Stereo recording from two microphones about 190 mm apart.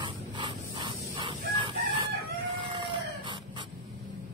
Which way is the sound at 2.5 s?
25° right (ahead or behind).